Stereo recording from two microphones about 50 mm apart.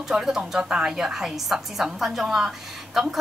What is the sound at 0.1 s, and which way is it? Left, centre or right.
A woman's voice, centre.